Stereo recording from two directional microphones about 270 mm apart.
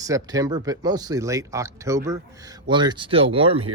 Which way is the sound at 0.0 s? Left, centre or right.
Centre.